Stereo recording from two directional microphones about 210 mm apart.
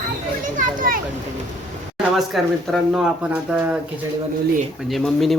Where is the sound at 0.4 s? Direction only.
40° right (ahead or behind).